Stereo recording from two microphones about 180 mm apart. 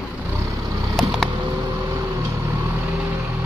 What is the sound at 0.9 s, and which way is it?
Vehicle, centre (ahead or behind).